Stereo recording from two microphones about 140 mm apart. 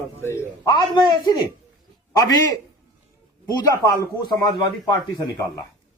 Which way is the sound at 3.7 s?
25° left (ahead or behind).